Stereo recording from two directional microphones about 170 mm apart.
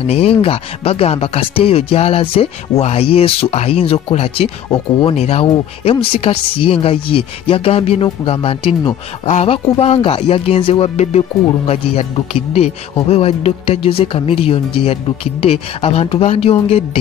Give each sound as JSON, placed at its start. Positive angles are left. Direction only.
{"t": 0.0, "sound": "speech", "side_deg": 35}